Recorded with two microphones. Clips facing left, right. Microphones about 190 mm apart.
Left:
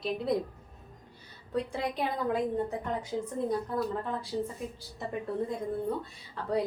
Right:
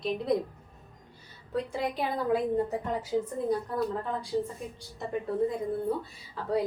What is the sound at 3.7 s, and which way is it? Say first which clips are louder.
Speech: right 1 dB; centre (ahead or behind).